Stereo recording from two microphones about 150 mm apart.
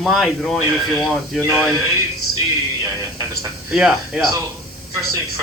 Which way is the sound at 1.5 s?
15° right (ahead or behind).